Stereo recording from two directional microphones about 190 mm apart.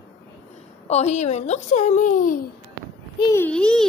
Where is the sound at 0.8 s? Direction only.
35° left (ahead or behind).